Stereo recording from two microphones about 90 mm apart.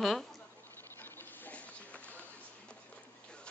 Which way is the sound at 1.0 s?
20° left (ahead or behind).